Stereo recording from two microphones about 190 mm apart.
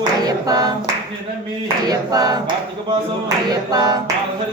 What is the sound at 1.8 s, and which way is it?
Clapping, 20° right (ahead or behind).